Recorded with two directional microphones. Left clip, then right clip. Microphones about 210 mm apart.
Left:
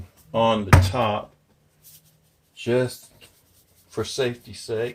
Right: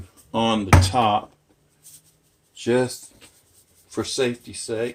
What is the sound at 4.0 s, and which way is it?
Speech, 25° right (ahead or behind).